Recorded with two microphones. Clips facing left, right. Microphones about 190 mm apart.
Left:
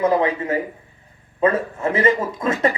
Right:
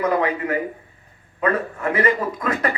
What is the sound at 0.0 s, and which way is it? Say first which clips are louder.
A man's voice: left 2 dB; 25° left (ahead or behind).